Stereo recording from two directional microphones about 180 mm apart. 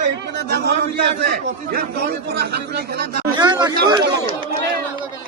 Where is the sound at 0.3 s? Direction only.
60° right (ahead or behind).